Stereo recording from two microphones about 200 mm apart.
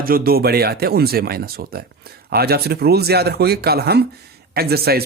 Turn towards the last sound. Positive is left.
turn(degrees=-50)  # may be behind; listen again after turning